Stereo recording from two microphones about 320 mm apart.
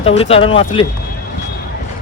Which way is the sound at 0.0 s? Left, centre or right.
Centre.